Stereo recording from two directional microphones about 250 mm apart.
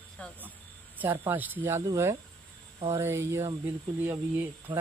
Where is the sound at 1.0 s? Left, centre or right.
Centre.